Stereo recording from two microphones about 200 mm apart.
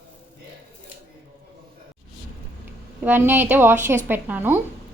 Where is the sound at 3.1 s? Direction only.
10° right (ahead or behind).